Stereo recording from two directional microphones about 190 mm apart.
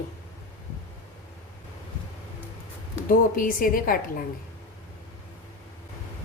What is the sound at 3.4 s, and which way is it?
Speech, 45° left (ahead or behind).